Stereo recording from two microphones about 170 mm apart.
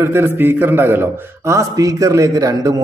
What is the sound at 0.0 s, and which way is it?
A man's voice, 15° right (ahead or behind).